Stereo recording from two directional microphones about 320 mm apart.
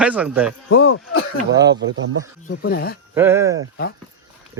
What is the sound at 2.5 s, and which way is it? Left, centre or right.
Speech, left.